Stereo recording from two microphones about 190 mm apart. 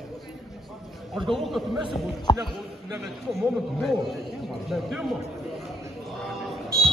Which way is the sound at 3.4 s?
Centre (ahead or behind).